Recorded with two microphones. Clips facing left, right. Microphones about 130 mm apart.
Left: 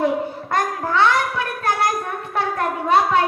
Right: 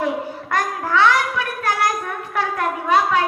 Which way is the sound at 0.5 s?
25° left (ahead or behind).